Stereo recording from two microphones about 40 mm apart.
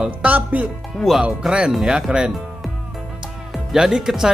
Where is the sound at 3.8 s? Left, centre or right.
Centre.